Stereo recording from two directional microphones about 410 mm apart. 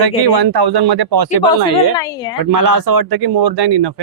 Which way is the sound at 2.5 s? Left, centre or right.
Right.